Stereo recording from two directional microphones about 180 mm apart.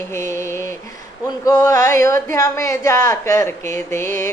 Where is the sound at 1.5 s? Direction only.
20° left (ahead or behind).